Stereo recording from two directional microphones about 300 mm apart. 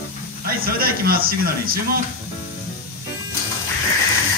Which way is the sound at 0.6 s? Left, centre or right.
Right.